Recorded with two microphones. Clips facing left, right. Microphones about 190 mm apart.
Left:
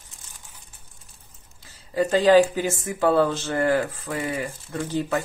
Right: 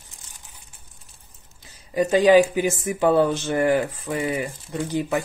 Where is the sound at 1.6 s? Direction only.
15° right (ahead or behind).